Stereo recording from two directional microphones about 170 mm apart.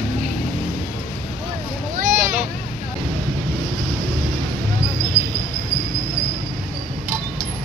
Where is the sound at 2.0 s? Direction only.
50° right (ahead or behind).